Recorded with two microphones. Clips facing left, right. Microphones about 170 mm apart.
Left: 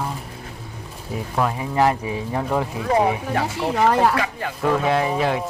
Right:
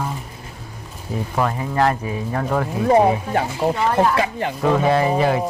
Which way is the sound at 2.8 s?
30° right (ahead or behind).